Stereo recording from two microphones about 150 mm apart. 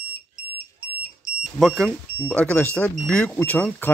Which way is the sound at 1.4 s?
Centre (ahead or behind).